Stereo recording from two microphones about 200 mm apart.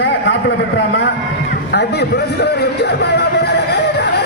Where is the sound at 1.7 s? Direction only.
55° left (ahead or behind).